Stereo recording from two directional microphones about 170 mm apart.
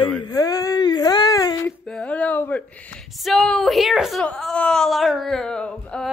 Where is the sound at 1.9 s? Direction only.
5° left (ahead or behind).